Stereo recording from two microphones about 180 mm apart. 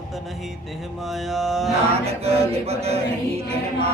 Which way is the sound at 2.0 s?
35° right (ahead or behind).